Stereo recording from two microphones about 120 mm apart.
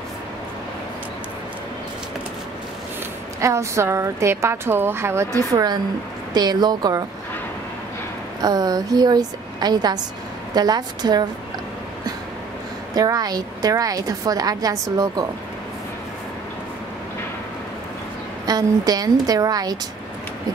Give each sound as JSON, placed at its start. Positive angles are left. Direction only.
{"t": 3.3, "sound": "a woman's voice", "side_deg": -25}
{"t": 8.4, "sound": "a woman's voice", "side_deg": -30}
{"t": 12.9, "sound": "a woman's voice", "side_deg": -30}
{"t": 18.4, "sound": "a woman's voice", "side_deg": -35}